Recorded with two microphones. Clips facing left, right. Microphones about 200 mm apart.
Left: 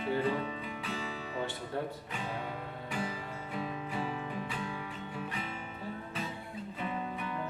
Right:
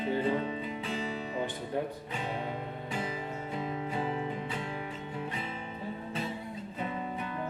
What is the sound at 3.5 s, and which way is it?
Music, 25° right (ahead or behind).